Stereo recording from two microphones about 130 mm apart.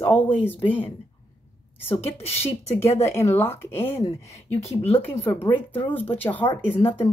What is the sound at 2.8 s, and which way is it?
Speech, 20° left (ahead or behind).